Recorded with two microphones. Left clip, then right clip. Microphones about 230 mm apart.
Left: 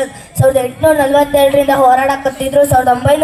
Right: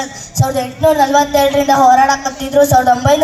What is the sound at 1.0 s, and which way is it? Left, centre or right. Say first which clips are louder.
Speech: left 1 dB; right.